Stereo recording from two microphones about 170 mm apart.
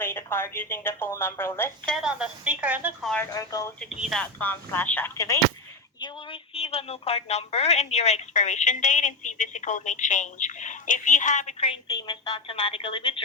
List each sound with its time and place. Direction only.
0.0 s a woman's voice: 15° left (ahead or behind)
1.9 s speech: 5° right (ahead or behind)
3.0 s speech: 5° left (ahead or behind)
3.3 s speech: 20° left (ahead or behind)
3.9 s speech: 5° right (ahead or behind)
4.2 s a woman's voice: 10° left (ahead or behind)
6.5 s a woman's voice: 35° left (ahead or behind)
11.9 s a woman's voice: 30° left (ahead or behind)